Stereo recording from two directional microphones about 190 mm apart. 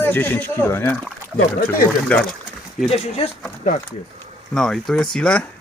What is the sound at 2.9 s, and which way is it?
Speech, 35° left (ahead or behind).